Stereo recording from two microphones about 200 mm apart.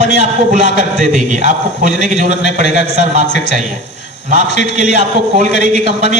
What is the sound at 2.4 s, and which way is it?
Speech, 60° left (ahead or behind).